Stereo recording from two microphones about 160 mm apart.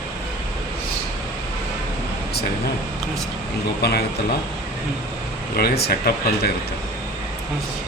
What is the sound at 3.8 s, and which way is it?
Speech, 90° left.